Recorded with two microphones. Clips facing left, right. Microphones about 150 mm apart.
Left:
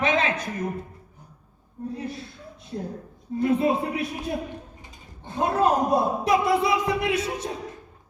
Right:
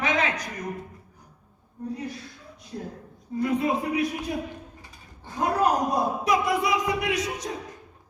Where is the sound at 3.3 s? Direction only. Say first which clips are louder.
Left 3 dB; 25° left (ahead or behind).